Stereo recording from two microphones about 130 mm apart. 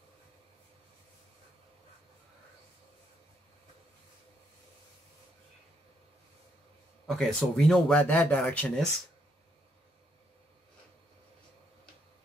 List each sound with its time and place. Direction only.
7.1 s speech: 5° left (ahead or behind)